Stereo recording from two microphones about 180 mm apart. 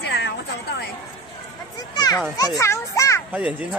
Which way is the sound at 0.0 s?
70° left (ahead or behind).